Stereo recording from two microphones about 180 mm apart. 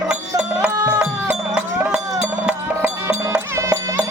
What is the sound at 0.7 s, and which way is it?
Music, 20° right (ahead or behind).